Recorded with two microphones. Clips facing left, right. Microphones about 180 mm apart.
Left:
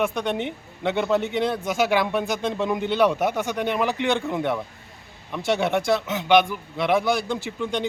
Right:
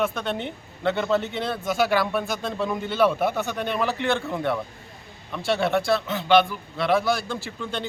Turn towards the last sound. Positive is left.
turn(degrees=15)  # may be behind; listen again after turning